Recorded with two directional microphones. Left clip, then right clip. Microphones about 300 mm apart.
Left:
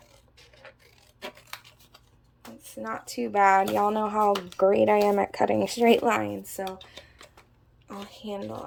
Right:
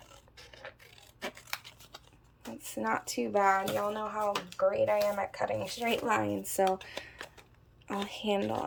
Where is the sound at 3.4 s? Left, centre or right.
Centre.